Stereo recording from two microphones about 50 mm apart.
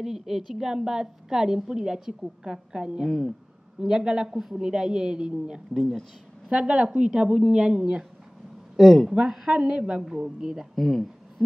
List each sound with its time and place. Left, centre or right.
0.0 s a woman's voice: centre
5.8 s speech: centre
6.5 s a woman's voice: right
8.7 s speech: centre
9.1 s a woman's voice: centre
10.0 s a woman's voice: centre